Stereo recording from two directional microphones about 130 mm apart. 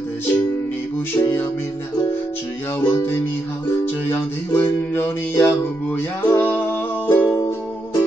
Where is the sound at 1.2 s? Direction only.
20° left (ahead or behind).